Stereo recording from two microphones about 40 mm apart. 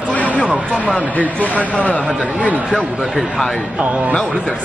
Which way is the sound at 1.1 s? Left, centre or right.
Left.